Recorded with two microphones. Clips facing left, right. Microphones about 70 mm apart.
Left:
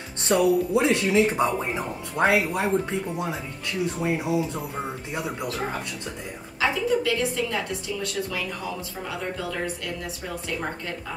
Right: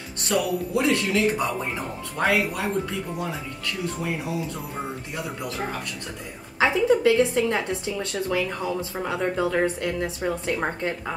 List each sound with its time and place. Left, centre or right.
0.2 s speech: left
6.6 s a woman's voice: right